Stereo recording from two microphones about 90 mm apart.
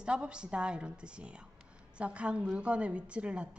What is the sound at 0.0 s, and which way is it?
A woman's voice, 10° right (ahead or behind).